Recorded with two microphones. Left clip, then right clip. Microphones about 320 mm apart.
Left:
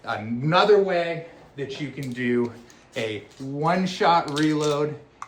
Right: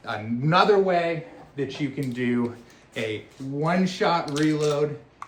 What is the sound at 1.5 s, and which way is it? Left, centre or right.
Speech, centre.